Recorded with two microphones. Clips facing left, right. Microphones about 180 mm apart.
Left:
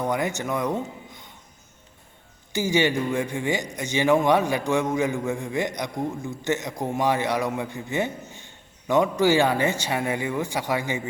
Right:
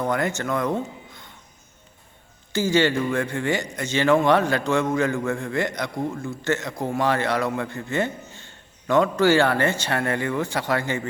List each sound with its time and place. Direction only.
0.0 s speech: 15° left (ahead or behind)
2.5 s a man's voice: 15° left (ahead or behind)